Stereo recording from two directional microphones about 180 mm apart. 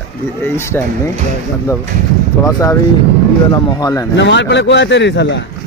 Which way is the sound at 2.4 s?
15° left (ahead or behind).